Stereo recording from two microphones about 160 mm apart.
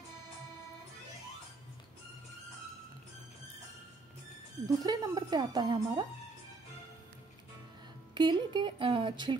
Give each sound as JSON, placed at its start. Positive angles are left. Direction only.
{"t": 4.6, "sound": "speech", "side_deg": -25}
{"t": 8.1, "sound": "speech", "side_deg": -25}